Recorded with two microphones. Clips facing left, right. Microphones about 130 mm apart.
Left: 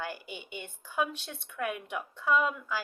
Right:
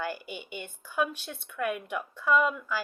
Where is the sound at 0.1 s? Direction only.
25° left (ahead or behind).